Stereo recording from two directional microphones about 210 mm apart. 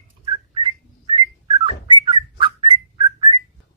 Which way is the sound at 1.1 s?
25° right (ahead or behind).